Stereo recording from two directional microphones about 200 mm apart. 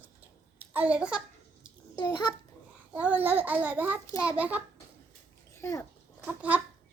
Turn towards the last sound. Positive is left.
turn(degrees=-5)  # may be behind; listen again after turning